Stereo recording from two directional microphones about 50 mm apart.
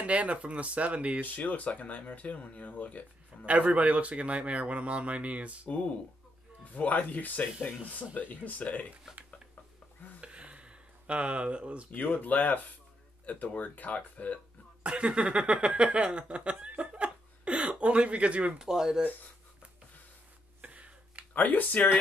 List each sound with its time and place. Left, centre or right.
0.0 s a man's voice: right
1.2 s speech: left
3.4 s a man's voice: right
5.7 s speech: left
10.2 s a sound: right
11.9 s speech: left
14.8 s speech: right
18.6 s speech: centre
20.6 s finger snapping: right
21.3 s speech: left